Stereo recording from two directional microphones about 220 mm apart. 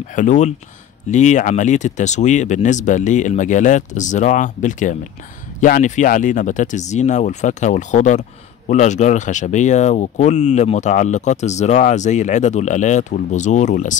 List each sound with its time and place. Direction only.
0.1 s speech: 35° left (ahead or behind)